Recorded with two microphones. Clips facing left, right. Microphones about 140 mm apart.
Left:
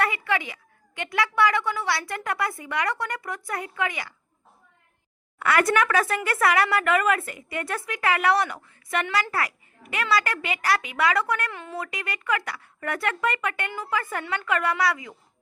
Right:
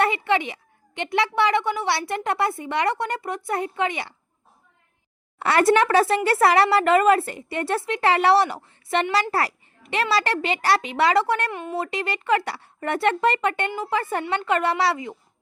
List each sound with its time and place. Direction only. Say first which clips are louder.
0.0 s speech: right 4 dB; 25° right (ahead or behind)
5.4 s speech: right 4 dB; 30° right (ahead or behind)